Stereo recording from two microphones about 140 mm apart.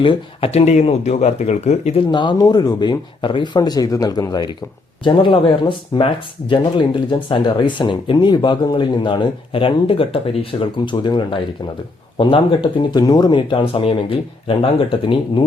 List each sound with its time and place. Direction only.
0.0 s speech: 40° left (ahead or behind)
2.0 s speech: 30° left (ahead or behind)